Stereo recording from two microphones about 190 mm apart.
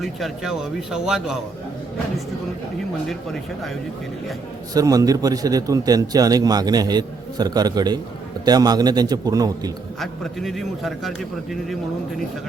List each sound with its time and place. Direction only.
0.0 s a man's voice: centre (ahead or behind)
3.1 s a man's voice: centre (ahead or behind)
4.7 s a man's voice: 20° right (ahead or behind)
10.0 s a man's voice: centre (ahead or behind)